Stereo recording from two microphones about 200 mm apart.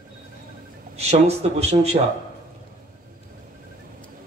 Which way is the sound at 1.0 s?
30° right (ahead or behind).